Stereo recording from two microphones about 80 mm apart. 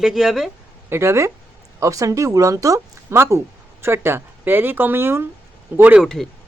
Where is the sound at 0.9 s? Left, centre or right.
Right.